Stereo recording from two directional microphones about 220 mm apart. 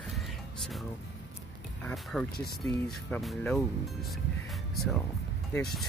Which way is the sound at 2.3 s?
45° left (ahead or behind).